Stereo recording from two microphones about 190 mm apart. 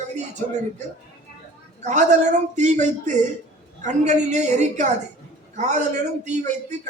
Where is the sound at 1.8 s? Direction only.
40° right (ahead or behind).